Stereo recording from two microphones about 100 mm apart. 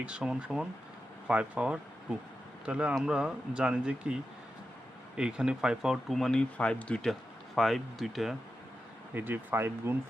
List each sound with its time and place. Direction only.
0.0 s speech: 10° right (ahead or behind); by 7.1 s 10° left (ahead or behind)
7.1 s speech: centre (ahead or behind)
9.1 s speech: 20° right (ahead or behind)